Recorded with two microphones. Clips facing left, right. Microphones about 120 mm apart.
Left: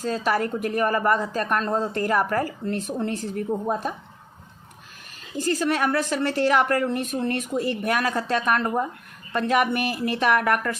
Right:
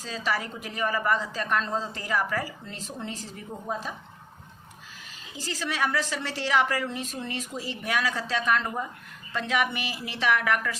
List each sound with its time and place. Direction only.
0.0 s speech: 50° left (ahead or behind)
5.4 s speech: 50° left (ahead or behind)